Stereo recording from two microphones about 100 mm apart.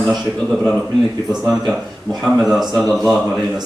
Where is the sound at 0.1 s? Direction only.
5° right (ahead or behind).